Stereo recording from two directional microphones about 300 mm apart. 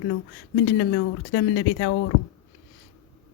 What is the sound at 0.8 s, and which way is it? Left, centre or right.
Speech, left.